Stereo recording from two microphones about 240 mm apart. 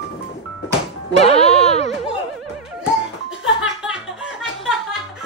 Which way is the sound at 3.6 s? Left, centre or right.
Centre.